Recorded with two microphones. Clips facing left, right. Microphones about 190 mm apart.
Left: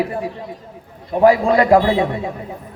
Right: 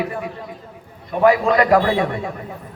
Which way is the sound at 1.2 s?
30° left (ahead or behind).